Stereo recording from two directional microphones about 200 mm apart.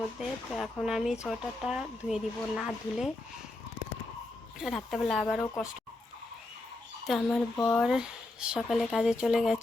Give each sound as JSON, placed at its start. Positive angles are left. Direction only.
{"t": 0.2, "sound": "speech", "side_deg": 0}
{"t": 4.6, "sound": "speech", "side_deg": 0}
{"t": 7.1, "sound": "speech", "side_deg": 5}